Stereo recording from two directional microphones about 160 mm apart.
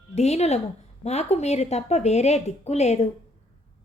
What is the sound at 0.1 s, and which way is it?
A woman's voice, 45° left (ahead or behind).